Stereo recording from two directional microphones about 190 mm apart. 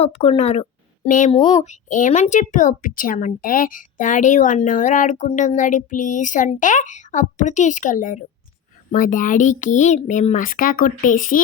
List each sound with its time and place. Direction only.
0.0 s a woman's voice: 30° left (ahead or behind)
1.3 s speech: 25° left (ahead or behind)
1.6 s a child's voice: 40° left (ahead or behind)